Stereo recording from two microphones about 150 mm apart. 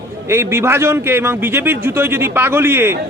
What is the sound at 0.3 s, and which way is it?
A man's voice, 15° right (ahead or behind).